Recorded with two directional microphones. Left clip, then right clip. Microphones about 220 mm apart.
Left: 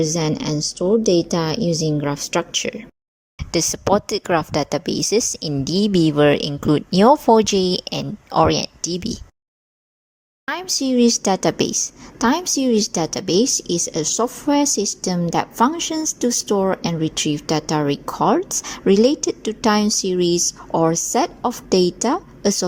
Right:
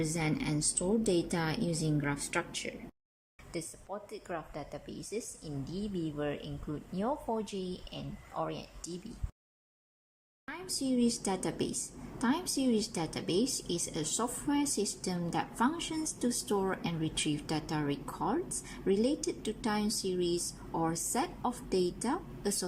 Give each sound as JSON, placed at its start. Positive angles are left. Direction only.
{"t": 0.0, "sound": "a woman's voice", "side_deg": 30}
{"t": 10.4, "sound": "a woman's voice", "side_deg": 40}